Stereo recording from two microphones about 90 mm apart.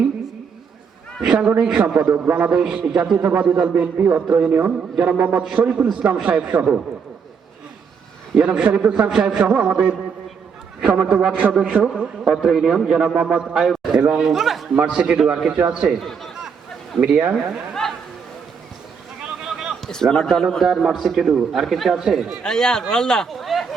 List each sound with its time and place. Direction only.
1.2 s a man's voice: 10° right (ahead or behind)
8.4 s a man's voice: 10° right (ahead or behind)
14.8 s a man's voice: 15° right (ahead or behind)
16.0 s chatter: centre (ahead or behind)
17.0 s a man's voice: 15° right (ahead or behind)
19.5 s a sound: 5° right (ahead or behind)
19.9 s a man's voice: 5° left (ahead or behind)
22.4 s a man's voice: 5° left (ahead or behind)